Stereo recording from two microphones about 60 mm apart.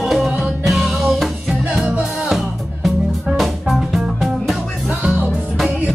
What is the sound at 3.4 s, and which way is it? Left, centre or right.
Music, centre.